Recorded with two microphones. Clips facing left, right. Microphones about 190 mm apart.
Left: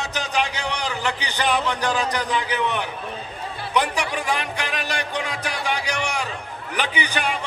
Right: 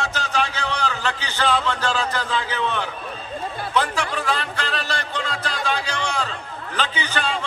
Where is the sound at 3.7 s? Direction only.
15° left (ahead or behind).